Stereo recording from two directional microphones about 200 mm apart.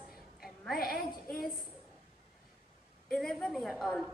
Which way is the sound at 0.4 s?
Centre (ahead or behind).